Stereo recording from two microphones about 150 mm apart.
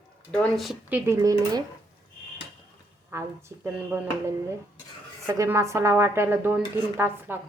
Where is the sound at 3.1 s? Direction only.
20° right (ahead or behind).